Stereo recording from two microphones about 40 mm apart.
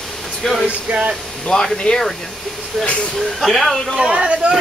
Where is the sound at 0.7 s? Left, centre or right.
Right.